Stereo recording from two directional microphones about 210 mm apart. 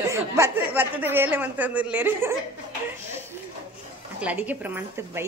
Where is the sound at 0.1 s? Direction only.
10° right (ahead or behind).